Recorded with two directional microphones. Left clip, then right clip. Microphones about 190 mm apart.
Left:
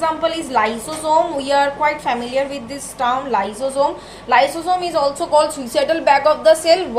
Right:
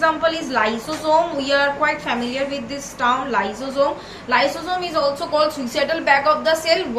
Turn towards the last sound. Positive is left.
turn(degrees=55)  # may be behind; listen again after turning